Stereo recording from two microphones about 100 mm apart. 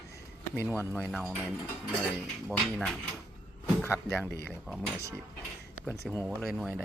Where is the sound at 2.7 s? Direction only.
5° left (ahead or behind).